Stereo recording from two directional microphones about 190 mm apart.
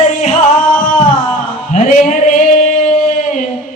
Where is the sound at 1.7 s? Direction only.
40° left (ahead or behind).